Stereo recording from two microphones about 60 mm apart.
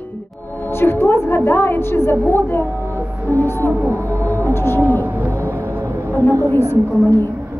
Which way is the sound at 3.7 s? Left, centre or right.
Right.